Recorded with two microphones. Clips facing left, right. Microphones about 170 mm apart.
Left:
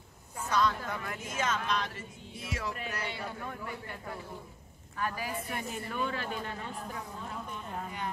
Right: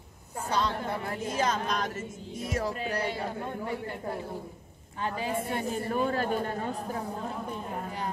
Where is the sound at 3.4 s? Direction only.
25° right (ahead or behind).